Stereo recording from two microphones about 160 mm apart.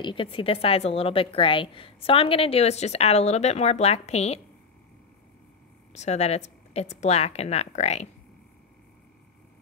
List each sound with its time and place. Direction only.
0.0 s a woman's voice: 30° left (ahead or behind)
5.9 s a woman's voice: 45° left (ahead or behind)